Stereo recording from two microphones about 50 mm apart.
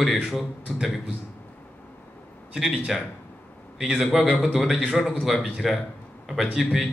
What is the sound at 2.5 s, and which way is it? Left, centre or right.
A man's voice, centre.